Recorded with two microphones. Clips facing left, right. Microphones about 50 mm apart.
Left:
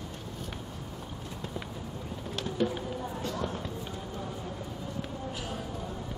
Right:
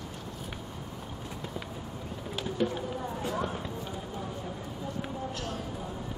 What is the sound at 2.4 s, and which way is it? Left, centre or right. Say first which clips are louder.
Music: even; centre.